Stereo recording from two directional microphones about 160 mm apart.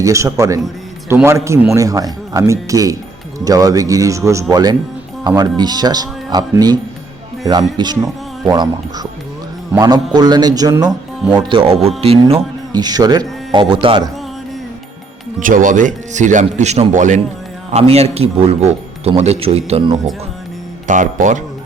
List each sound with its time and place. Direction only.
0.0 s a man's voice: 20° right (ahead or behind)
7.8 s a man's voice: 25° right (ahead or behind)
12.7 s speech: 25° right (ahead or behind)
15.4 s a man's voice: 55° right (ahead or behind); by 20.0 s 40° right (ahead or behind)
20.8 s speech: 50° right (ahead or behind)